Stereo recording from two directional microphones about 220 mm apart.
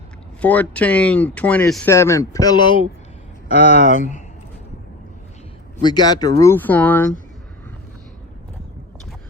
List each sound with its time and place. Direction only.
0.4 s speech: 5° left (ahead or behind); by 4.2 s 35° left (ahead or behind)
5.8 s speech: 20° left (ahead or behind)